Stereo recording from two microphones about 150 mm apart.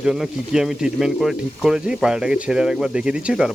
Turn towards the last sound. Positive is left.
turn(degrees=-5)  # may be behind; listen again after turning